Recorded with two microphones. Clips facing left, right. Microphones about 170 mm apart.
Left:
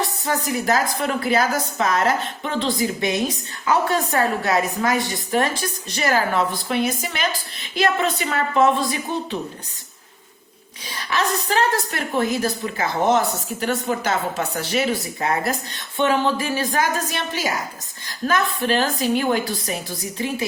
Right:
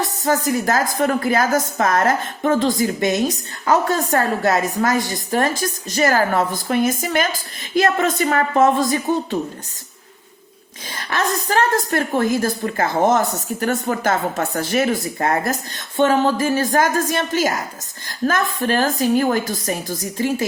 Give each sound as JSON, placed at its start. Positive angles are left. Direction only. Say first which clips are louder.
{"t": 0.3, "sound": "a woman's voice", "louder": "right 4 dB", "side_deg": -45}
{"t": 10.8, "sound": "a woman's voice", "louder": "right 1 dB", "side_deg": -50}